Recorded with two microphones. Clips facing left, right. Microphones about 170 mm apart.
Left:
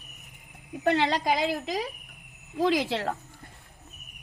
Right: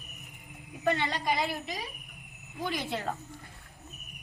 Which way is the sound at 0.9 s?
90° left.